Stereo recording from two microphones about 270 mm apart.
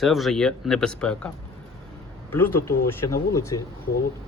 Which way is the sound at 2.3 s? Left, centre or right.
Centre.